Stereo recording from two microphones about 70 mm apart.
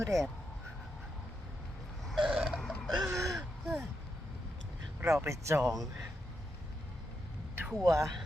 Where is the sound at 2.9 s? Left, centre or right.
Right.